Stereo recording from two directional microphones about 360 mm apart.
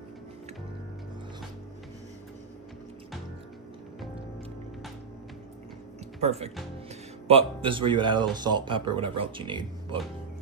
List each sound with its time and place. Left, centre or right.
6.2 s speech: centre